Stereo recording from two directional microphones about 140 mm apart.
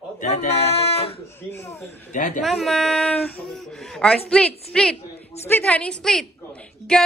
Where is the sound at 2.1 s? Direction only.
60° left (ahead or behind).